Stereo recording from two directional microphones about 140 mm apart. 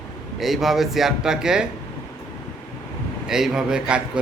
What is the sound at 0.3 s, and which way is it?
A man's voice, centre (ahead or behind).